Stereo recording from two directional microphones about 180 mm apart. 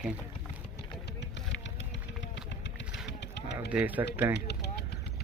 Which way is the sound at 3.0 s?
70° left (ahead or behind).